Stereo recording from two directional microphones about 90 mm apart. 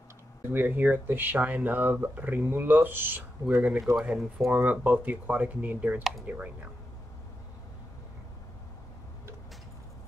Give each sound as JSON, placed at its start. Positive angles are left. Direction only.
{"t": 0.5, "sound": "speech", "side_deg": -20}
{"t": 3.9, "sound": "speech", "side_deg": -5}
{"t": 4.5, "sound": "speech", "side_deg": -20}